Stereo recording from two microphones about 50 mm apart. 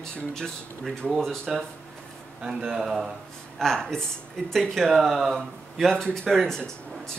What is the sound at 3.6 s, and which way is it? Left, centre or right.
Speech, centre.